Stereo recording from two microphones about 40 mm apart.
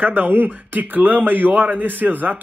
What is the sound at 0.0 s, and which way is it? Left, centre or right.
A man's voice, right.